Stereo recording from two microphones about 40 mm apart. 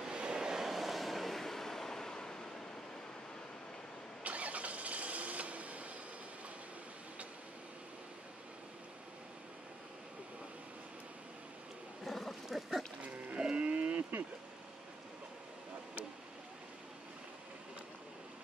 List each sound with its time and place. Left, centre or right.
0.0 s vehicle: right
0.7 s vehicle: centre
4.2 s vehicle: right
12.0 s a sound: centre
13.4 s livestock: right